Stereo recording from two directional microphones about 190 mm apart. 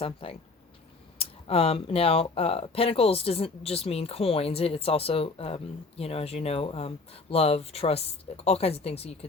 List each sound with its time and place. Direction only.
0.0 s speech: 30° left (ahead or behind)